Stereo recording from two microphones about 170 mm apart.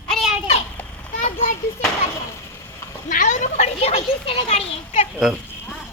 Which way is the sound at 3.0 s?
50° left (ahead or behind).